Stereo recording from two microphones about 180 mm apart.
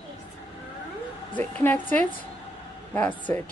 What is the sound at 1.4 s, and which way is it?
Speech, 10° left (ahead or behind).